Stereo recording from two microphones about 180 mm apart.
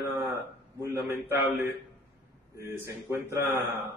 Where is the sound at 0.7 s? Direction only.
15° right (ahead or behind).